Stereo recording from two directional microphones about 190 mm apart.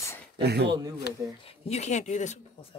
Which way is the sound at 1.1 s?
60° left (ahead or behind).